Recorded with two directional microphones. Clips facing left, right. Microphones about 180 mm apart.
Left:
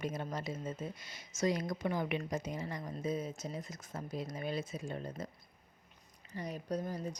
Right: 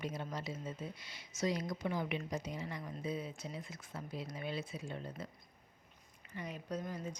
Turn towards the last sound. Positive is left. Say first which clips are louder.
# left 4 dB
turn(degrees=35)  # may be behind; listen again after turning